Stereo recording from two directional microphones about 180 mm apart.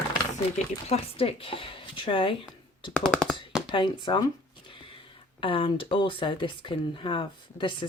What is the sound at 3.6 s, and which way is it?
Speech, 25° left (ahead or behind).